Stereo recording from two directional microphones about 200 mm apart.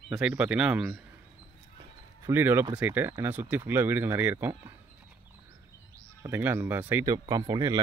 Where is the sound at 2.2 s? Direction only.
10° right (ahead or behind).